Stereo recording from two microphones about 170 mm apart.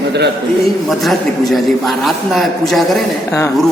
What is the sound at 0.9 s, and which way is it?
A man's voice, centre (ahead or behind).